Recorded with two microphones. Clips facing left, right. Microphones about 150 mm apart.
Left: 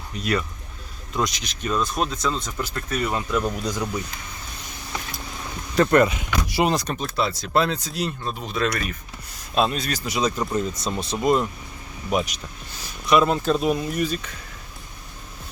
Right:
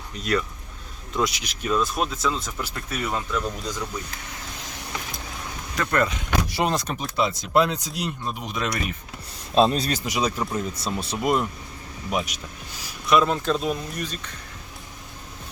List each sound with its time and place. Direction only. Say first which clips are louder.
0.2 s speech: even; centre (ahead or behind)
3.2 s speech: left 3 dB; 10° left (ahead or behind)
5.7 s speech: left 7 dB; 25° left (ahead or behind)
6.1 s speech: right 1 dB; 10° left (ahead or behind)
7.0 s speech: even; 15° right (ahead or behind)
9.6 s speech: right 3 dB; 35° right (ahead or behind)
10.0 s speech: left 1 dB; 10° right (ahead or behind); by 14.3 s 10° left (ahead or behind)